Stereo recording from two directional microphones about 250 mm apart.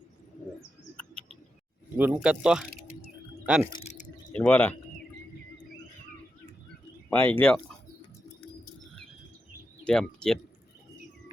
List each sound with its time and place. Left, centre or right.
2.0 s speech: centre
3.7 s a sound: left
4.3 s speech: centre
7.1 s speech: centre
9.8 s speech: centre